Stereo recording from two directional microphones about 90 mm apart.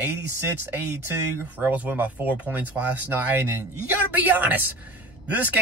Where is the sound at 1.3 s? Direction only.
20° right (ahead or behind).